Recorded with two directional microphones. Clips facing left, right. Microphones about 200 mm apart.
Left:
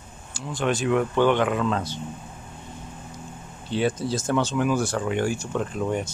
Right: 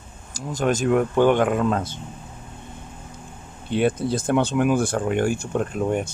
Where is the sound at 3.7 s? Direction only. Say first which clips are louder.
Right 3 dB; 55° right (ahead or behind).